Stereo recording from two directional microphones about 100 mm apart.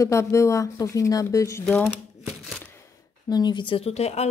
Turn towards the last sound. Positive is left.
turn(degrees=90)